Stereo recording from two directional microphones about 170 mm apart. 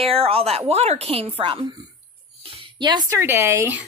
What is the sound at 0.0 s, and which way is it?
A woman's voice, 35° right (ahead or behind).